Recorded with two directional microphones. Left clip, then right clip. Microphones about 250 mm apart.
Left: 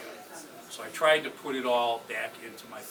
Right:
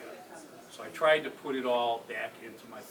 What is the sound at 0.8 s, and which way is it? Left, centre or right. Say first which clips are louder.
Speech: left 2 dB; centre.